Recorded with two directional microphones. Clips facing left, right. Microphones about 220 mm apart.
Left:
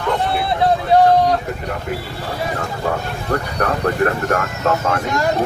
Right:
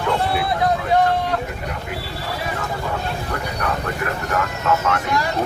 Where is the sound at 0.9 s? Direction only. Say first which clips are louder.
Left 5 dB; 35° left (ahead or behind).